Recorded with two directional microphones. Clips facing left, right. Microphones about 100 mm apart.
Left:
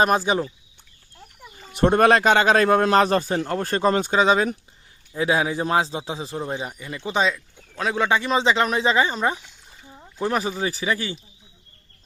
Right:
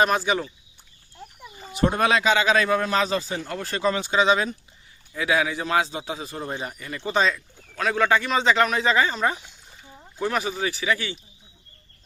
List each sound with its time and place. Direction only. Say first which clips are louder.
0.3 s speech: left 2 dB; 30° left (ahead or behind)
1.7 s a man's voice: left 5 dB; 55° left (ahead or behind); by 4.4 s 40° left (ahead or behind)
5.1 s a man's voice: left 2 dB; 30° left (ahead or behind)
6.4 s a man's voice: left 2 dB; 15° left (ahead or behind)
10.2 s speech: left 2 dB; 30° left (ahead or behind)